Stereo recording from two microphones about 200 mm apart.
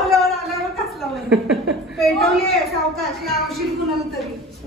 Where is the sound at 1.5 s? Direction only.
Centre (ahead or behind).